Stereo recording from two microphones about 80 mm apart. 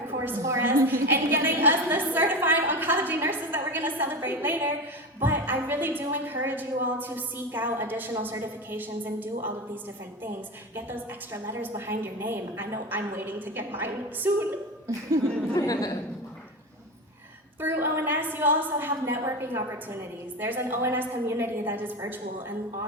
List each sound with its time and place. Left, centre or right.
0.4 s a woman's voice: right
11.4 s a woman's voice: right
15.5 s a woman's voice: left
17.6 s a woman's voice: right